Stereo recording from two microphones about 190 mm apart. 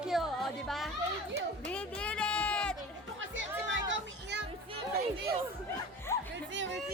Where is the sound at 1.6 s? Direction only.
5° left (ahead or behind).